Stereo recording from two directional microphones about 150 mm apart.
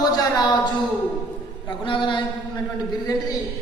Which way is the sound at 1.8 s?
35° left (ahead or behind).